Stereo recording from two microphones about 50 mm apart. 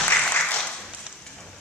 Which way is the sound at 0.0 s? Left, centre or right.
Left.